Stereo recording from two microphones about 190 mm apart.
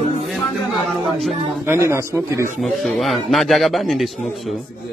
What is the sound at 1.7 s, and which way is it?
Speech, 15° right (ahead or behind).